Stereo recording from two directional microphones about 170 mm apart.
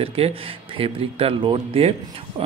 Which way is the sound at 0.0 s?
35° right (ahead or behind).